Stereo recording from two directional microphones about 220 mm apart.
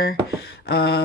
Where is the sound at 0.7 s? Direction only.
45° left (ahead or behind).